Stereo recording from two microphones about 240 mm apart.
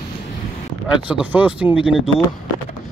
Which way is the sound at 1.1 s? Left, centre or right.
Centre.